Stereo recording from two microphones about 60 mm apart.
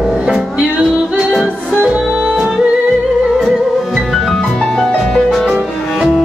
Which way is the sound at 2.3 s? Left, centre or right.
Centre.